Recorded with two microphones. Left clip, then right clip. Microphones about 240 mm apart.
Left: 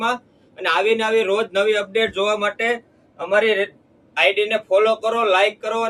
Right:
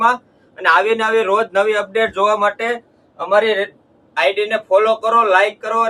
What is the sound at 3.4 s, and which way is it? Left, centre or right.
Speech, right.